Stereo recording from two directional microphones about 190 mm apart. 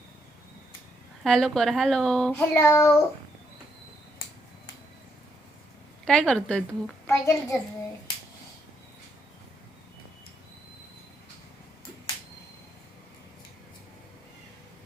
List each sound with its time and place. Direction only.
1.2 s a child's voice: centre (ahead or behind)
6.1 s a child's voice: 5° left (ahead or behind)
7.1 s a child's voice: 15° left (ahead or behind)